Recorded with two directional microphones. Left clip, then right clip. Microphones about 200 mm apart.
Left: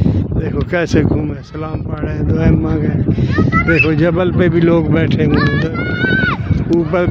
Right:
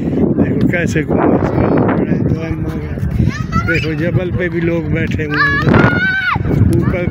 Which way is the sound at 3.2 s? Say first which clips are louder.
Left 3 dB; 40° left (ahead or behind).